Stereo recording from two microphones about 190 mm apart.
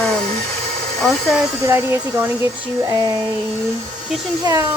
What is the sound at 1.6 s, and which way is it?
Speech, 15° right (ahead or behind).